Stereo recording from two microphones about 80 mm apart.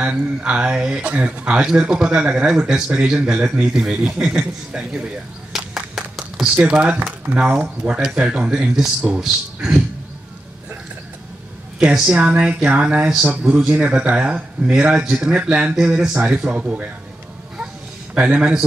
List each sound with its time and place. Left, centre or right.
0.0 s speech: centre
5.5 s a sound: centre
6.7 s speech: centre
11.8 s speech: centre
18.1 s speech: centre